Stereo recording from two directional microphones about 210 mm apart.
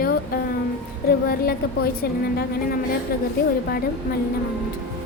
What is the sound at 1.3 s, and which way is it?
Music, 45° left (ahead or behind).